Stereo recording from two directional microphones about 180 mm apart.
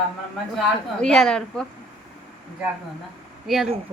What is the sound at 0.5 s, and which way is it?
Speech, 5° left (ahead or behind).